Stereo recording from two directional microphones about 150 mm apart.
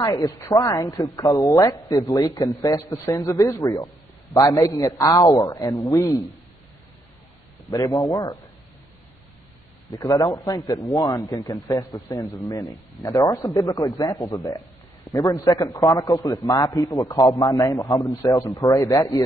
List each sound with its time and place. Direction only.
0.0 s speech: 25° left (ahead or behind)
7.7 s speech: 25° left (ahead or behind)
9.8 s speech: 25° left (ahead or behind)